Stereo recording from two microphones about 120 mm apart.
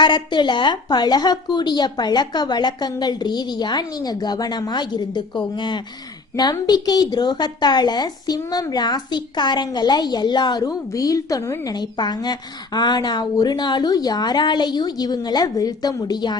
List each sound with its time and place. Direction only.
0.0 s a woman's voice: 40° left (ahead or behind)